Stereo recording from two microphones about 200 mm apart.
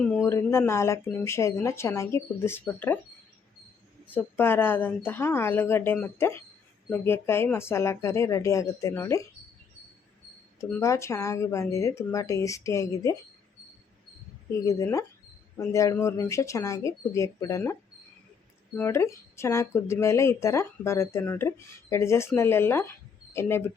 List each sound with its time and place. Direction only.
0.3 s speech: 10° left (ahead or behind)
4.1 s speech: 10° left (ahead or behind)
10.6 s speech: 15° left (ahead or behind)
14.7 s speech: 15° left (ahead or behind)
18.8 s speech: 15° left (ahead or behind)